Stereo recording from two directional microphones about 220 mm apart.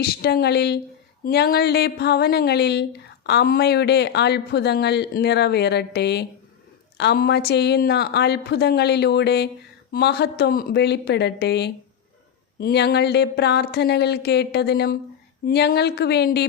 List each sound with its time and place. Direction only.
0.0 s speech: 45° left (ahead or behind)